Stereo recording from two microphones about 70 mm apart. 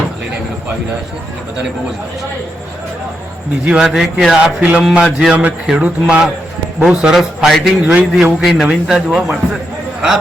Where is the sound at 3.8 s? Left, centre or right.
Centre.